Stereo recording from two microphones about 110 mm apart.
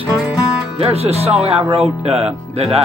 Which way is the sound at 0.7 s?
65° right (ahead or behind).